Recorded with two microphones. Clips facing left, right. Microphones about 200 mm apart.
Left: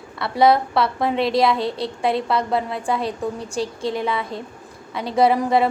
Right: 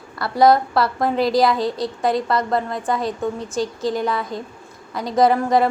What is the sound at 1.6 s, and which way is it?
Speech, 30° left (ahead or behind).